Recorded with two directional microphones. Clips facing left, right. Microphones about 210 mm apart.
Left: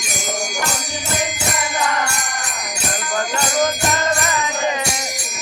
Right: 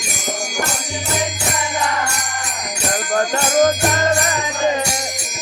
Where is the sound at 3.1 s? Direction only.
45° right (ahead or behind).